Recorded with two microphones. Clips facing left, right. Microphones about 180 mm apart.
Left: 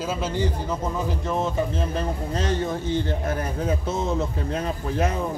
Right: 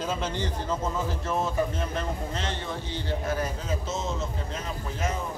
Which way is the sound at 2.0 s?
40° left (ahead or behind).